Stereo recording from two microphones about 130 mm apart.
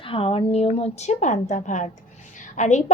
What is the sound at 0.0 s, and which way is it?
A woman's voice, 45° left (ahead or behind).